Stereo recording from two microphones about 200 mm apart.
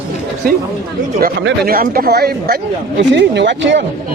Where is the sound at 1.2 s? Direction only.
55° right (ahead or behind).